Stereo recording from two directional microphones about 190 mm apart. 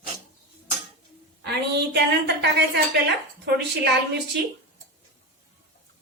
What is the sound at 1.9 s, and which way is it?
A woman's voice, 60° right (ahead or behind).